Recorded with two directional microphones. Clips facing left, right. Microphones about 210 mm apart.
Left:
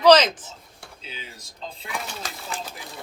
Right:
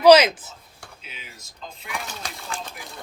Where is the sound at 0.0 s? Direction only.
10° right (ahead or behind).